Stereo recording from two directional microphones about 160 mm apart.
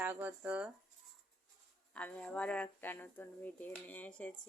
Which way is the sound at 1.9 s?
5° left (ahead or behind).